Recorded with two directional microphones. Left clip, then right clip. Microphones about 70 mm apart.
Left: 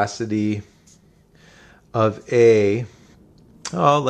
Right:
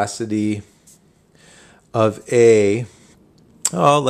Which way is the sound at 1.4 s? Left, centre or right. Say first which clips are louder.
Right 1 dB; right.